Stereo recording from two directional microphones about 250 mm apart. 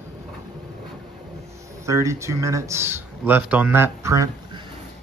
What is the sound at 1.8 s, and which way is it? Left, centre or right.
Speech, centre.